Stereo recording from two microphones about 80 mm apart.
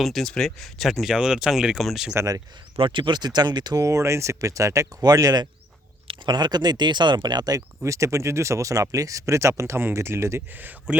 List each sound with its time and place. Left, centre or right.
0.0 s speech: centre
2.1 s speech: right
2.7 s speech: right
3.8 s speech: right
6.1 s speech: right
7.9 s speech: right